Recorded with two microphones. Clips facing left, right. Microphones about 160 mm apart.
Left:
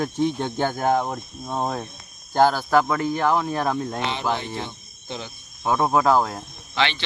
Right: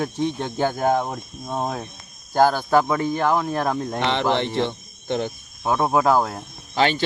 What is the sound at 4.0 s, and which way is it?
Speech, 70° right (ahead or behind).